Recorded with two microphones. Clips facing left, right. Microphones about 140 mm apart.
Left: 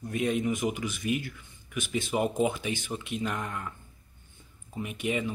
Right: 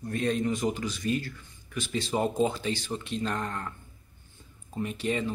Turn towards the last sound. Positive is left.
turn(degrees=10)  # may be behind; listen again after turning